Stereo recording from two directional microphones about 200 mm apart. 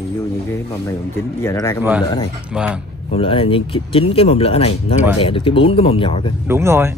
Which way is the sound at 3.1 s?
25° left (ahead or behind).